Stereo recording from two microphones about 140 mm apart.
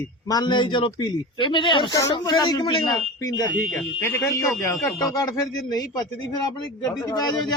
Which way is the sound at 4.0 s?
20° left (ahead or behind).